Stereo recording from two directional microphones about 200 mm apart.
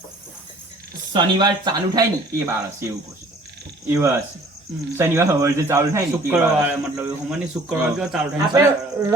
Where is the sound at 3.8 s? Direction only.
10° right (ahead or behind).